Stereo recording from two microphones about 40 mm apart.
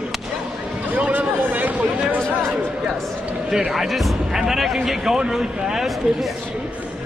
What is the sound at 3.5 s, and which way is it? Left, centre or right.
A man's voice, centre.